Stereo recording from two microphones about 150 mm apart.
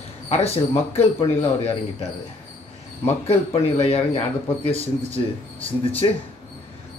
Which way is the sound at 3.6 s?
40° left (ahead or behind).